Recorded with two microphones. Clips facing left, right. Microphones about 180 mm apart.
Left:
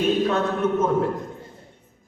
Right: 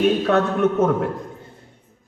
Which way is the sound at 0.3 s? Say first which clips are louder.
Right 4 dB; 65° right (ahead or behind).